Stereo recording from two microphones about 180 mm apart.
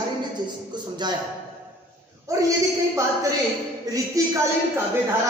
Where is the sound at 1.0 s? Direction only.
25° right (ahead or behind).